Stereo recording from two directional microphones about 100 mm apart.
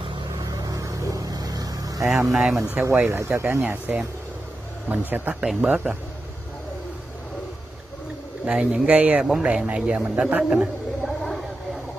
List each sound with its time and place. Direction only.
0.5 s vehicle: 40° right (ahead or behind)
2.0 s speech: 5° right (ahead or behind)
2.7 s speech: 20° right (ahead or behind)
8.5 s a man's voice: 10° right (ahead or behind)